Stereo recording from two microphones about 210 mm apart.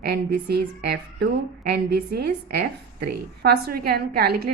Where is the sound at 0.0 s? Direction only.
50° right (ahead or behind).